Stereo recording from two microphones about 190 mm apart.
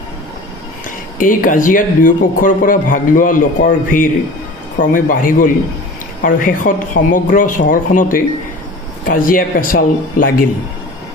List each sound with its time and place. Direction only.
1.1 s speech: 45° left (ahead or behind)